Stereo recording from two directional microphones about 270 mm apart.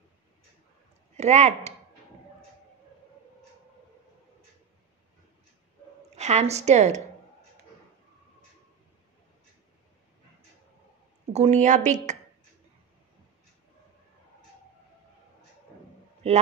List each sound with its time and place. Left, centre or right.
1.1 s speech: right
6.0 s a woman's voice: right
11.3 s speech: right